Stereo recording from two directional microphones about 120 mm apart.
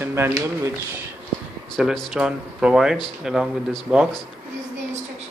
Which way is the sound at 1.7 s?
5° left (ahead or behind).